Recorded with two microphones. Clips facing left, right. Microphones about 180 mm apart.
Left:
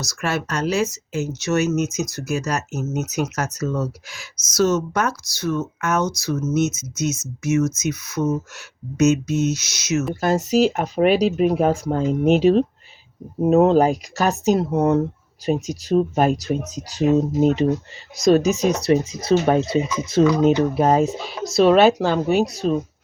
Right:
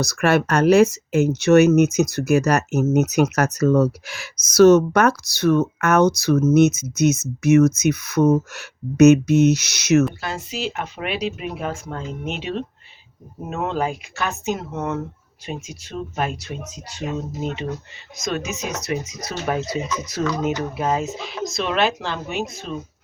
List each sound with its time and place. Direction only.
0.0 s speech: 60° right (ahead or behind)
10.2 s speech: 45° left (ahead or behind)